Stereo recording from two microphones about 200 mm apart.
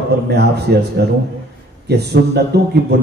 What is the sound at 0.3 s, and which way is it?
A man's voice, 55° right (ahead or behind).